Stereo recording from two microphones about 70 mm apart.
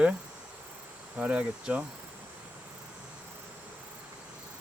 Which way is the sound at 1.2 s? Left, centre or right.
Centre.